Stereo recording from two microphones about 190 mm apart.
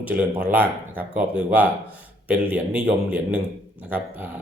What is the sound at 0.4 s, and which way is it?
Speech, 10° right (ahead or behind).